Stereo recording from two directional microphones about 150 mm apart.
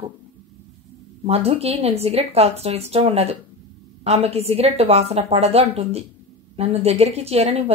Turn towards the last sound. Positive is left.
turn(degrees=-45)  # may be behind; listen again after turning